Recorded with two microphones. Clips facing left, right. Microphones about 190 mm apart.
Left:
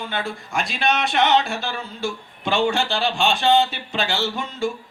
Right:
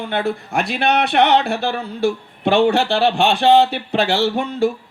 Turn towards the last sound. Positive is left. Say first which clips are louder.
# right 7 dB
turn(degrees=-60)  # may be behind; listen again after turning